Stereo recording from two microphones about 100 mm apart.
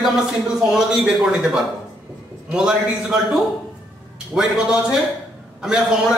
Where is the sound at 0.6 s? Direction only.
10° right (ahead or behind).